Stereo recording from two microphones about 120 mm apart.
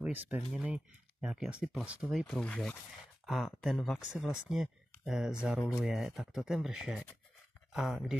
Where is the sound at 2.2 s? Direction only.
5° left (ahead or behind).